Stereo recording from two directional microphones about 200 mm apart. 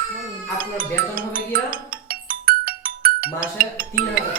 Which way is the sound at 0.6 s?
45° right (ahead or behind).